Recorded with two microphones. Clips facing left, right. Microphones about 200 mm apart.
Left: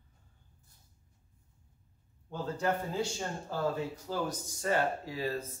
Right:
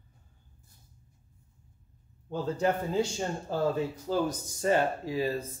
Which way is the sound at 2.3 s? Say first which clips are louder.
Right 4 dB; 20° right (ahead or behind).